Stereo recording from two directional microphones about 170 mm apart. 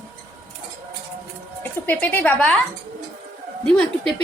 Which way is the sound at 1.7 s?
10° left (ahead or behind).